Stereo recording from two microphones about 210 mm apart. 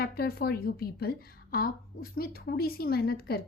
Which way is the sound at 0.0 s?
45° left (ahead or behind).